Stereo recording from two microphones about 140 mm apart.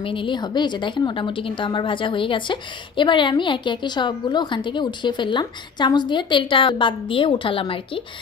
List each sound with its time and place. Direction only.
0.0 s a woman's voice: 35° left (ahead or behind)